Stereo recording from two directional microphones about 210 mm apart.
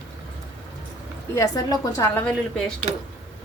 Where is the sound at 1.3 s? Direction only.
15° left (ahead or behind).